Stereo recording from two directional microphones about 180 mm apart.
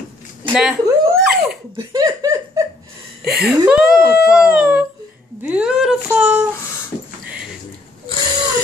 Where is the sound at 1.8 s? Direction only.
20° right (ahead or behind).